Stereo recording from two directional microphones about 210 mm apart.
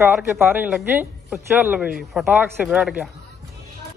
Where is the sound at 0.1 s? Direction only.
10° right (ahead or behind).